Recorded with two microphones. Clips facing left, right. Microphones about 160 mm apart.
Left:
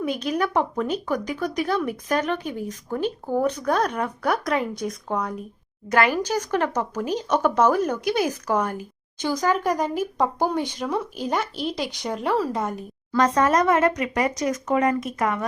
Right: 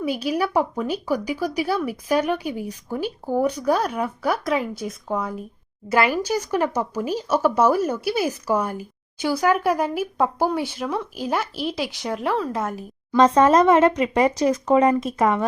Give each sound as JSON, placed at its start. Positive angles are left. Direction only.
{"t": 0.0, "sound": "speech", "side_deg": -5}
{"t": 13.1, "sound": "speech", "side_deg": -25}